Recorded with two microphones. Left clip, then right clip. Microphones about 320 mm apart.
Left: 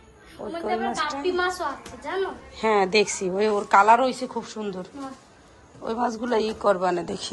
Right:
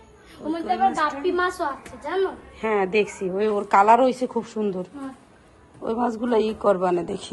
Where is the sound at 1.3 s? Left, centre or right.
Right.